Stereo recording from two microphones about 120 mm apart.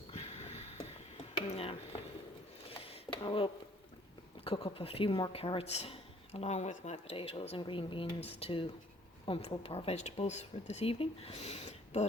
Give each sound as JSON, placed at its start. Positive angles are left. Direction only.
{"t": 0.1, "sound": "a sound", "side_deg": 65}
{"t": 1.5, "sound": "mechanisms", "side_deg": 55}
{"t": 2.6, "sound": "a sound", "side_deg": 50}
{"t": 4.4, "sound": "speech", "side_deg": 50}
{"t": 5.3, "sound": "speech", "side_deg": 55}
{"t": 8.2, "sound": "speech", "side_deg": 55}